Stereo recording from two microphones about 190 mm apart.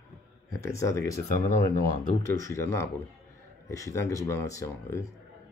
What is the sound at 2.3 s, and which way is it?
Speech, 15° left (ahead or behind).